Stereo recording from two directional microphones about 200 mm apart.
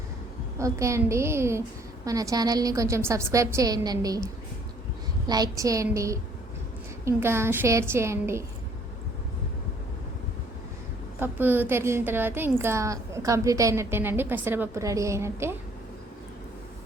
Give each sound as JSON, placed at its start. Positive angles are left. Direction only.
{"t": 0.6, "sound": "a woman's voice", "side_deg": -15}
{"t": 11.2, "sound": "a woman's voice", "side_deg": -10}